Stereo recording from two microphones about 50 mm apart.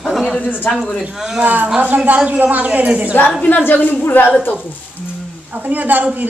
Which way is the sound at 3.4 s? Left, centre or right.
Left.